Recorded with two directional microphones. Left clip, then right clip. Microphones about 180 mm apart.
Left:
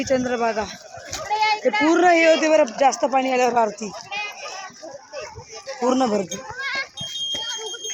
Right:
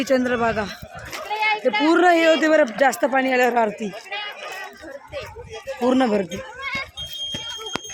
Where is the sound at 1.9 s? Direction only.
10° right (ahead or behind).